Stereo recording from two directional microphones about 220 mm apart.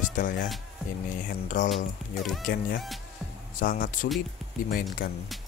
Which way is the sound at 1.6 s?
35° left (ahead or behind).